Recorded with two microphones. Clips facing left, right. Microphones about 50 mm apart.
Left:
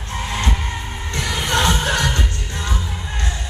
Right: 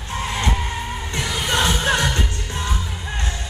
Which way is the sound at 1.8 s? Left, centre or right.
Right.